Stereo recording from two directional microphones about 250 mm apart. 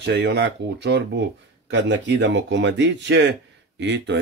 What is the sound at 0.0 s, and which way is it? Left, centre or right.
Speech, right.